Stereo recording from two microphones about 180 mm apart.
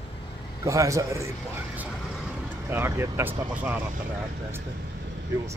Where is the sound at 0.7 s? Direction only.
15° right (ahead or behind).